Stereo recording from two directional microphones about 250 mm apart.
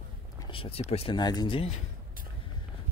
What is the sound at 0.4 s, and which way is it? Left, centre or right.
Speech, left.